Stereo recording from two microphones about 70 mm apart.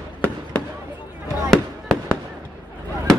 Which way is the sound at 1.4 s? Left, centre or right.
Centre.